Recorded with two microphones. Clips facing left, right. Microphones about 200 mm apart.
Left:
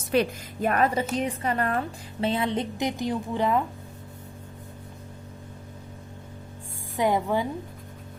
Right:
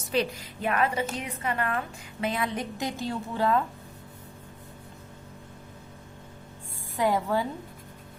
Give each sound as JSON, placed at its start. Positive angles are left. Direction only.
{"t": 0.1, "sound": "a woman's voice", "side_deg": 50}
{"t": 6.9, "sound": "a woman's voice", "side_deg": 20}